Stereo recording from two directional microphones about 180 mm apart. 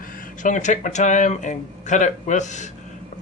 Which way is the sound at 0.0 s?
50° left (ahead or behind).